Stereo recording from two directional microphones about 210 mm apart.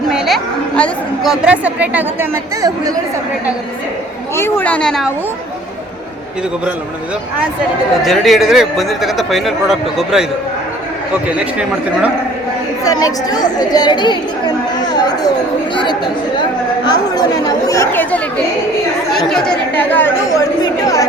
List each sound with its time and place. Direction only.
0.1 s a woman's voice: centre (ahead or behind); by 2.9 s 15° right (ahead or behind)
4.4 s speech: 10° left (ahead or behind)
8.0 s a woman's voice: centre (ahead or behind)
12.8 s speech: 15° left (ahead or behind)
15.7 s speech: 20° left (ahead or behind)